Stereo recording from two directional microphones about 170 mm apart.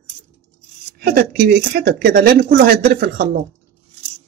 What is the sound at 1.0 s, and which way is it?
Speech, 60° right (ahead or behind).